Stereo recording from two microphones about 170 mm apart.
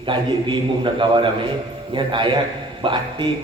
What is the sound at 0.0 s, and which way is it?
A man's voice, 30° right (ahead or behind).